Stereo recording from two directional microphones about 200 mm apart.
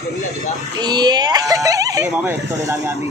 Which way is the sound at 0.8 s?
20° right (ahead or behind).